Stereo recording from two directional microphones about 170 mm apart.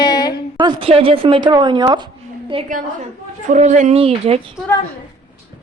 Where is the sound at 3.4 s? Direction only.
45° right (ahead or behind).